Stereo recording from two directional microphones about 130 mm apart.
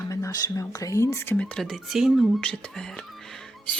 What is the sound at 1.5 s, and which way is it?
Speech, centre (ahead or behind).